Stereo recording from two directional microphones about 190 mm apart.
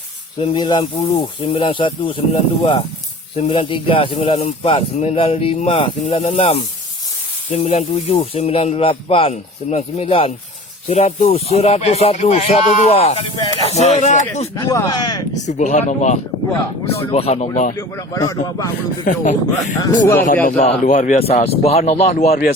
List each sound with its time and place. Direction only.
0.3 s speech: 25° left (ahead or behind)
14.5 s speech: 20° left (ahead or behind)
15.4 s speech: 40° left (ahead or behind)
17.7 s speech: 15° left (ahead or behind)
19.0 s speech: 40° left (ahead or behind)
19.8 s speech: 15° left (ahead or behind)
20.2 s speech: 40° left (ahead or behind)